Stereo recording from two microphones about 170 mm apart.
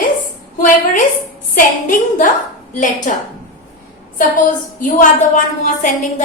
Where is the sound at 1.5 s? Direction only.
50° left (ahead or behind).